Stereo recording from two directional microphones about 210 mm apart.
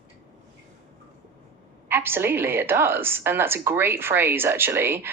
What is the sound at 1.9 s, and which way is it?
A woman's voice, 10° right (ahead or behind).